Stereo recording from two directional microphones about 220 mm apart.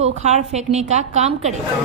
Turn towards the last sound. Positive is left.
turn(degrees=-30)  # may be behind; listen again after turning